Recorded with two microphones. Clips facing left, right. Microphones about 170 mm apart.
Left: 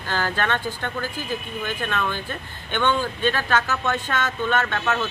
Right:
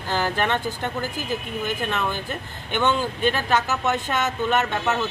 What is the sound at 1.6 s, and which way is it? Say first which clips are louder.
Speech: even; 15° right (ahead or behind).